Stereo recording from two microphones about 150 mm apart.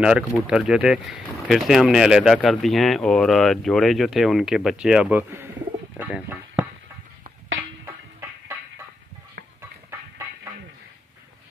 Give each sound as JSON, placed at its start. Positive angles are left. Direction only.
{"t": 0.0, "sound": "speech", "side_deg": -5}
{"t": 5.9, "sound": "a sound", "side_deg": -5}
{"t": 7.8, "sound": "music", "side_deg": -20}
{"t": 9.6, "sound": "music", "side_deg": -20}